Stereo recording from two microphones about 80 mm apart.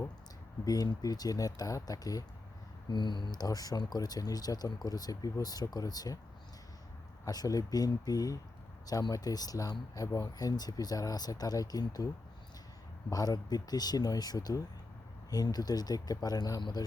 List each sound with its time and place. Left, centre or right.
0.6 s speech: left
2.9 s speech: left
3.4 s speech: left
7.3 s speech: left